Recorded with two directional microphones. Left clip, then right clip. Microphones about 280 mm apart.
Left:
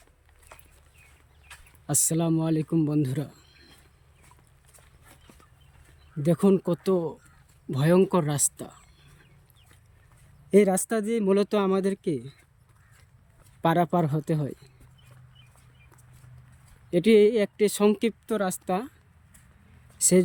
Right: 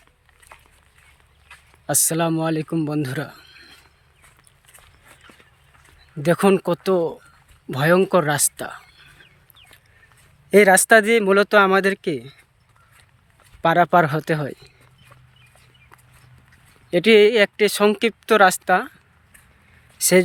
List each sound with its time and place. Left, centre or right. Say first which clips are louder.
1.5 s speech: right 8 dB; centre
3.3 s a sound: right 10 dB; centre
6.2 s speech: right 6 dB; centre
10.7 s speech: right 14 dB; right
11.1 s speech: right 9 dB; centre
13.6 s speech: right 9 dB; centre
16.9 s speech: right 6 dB; centre
20.0 s speech: right 6 dB; centre